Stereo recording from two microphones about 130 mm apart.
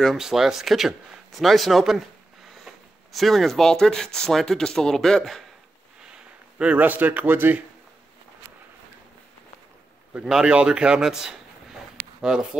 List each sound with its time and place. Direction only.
0.0 s speech: centre (ahead or behind)
6.1 s speech: 10° right (ahead or behind)
10.1 s a man's voice: 5° right (ahead or behind)